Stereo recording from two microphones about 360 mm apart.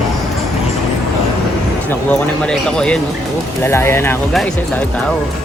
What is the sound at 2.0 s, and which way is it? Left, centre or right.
A man's voice, centre.